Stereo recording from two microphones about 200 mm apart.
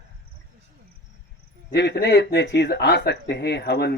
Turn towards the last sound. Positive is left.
turn(degrees=55)  # may be behind; listen again after turning